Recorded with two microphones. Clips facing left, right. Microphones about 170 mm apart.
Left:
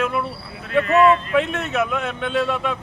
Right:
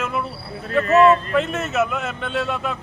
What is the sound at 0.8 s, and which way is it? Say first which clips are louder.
Speech: right 2 dB; 40° right (ahead or behind).